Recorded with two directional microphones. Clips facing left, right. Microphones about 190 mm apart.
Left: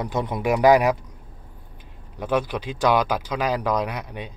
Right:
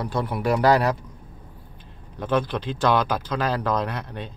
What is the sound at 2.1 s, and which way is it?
Speech, 10° left (ahead or behind).